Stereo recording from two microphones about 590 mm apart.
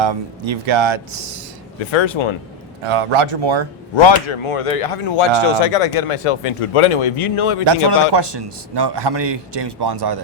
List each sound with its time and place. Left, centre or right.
0.0 s a man's voice: right
1.9 s speech: left
2.8 s speech: right
3.9 s speech: left
5.6 s speech: left
7.6 s a man's voice: right